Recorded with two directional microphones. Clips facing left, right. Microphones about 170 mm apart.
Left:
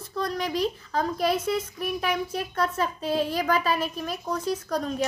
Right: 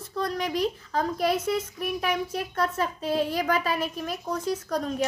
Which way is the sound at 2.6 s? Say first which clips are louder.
Even; 20° right (ahead or behind).